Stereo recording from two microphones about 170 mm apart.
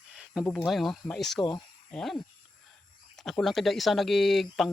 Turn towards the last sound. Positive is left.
turn(degrees=0)  # may be behind; listen again after turning